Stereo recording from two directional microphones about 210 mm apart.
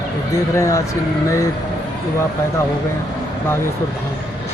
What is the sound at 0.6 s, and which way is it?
Speech, 15° left (ahead or behind).